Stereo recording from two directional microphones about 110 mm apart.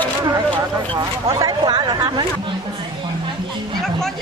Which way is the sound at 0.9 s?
45° right (ahead or behind).